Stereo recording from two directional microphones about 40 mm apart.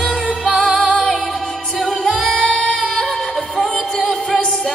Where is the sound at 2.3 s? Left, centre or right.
Left.